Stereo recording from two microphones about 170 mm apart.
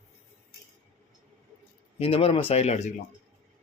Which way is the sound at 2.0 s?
35° left (ahead or behind).